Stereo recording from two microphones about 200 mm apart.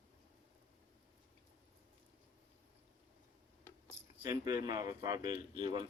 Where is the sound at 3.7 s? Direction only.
10° left (ahead or behind).